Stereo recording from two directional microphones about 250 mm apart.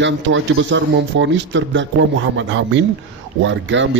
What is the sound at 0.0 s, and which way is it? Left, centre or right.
A man's voice, right.